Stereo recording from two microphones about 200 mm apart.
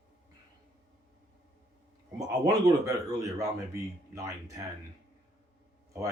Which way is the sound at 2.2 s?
20° right (ahead or behind).